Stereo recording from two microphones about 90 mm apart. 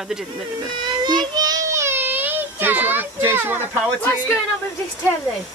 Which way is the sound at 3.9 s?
15° left (ahead or behind).